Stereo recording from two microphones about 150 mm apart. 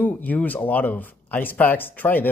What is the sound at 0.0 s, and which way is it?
Speech, 10° left (ahead or behind).